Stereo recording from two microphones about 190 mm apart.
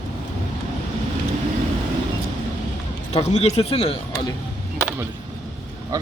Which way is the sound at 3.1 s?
35° left (ahead or behind).